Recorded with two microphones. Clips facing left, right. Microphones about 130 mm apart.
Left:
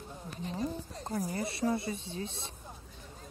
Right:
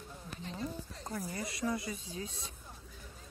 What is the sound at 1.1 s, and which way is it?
Speech, 35° left (ahead or behind).